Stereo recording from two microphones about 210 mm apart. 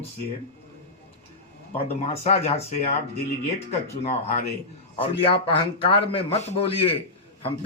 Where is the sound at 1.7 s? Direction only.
30° left (ahead or behind).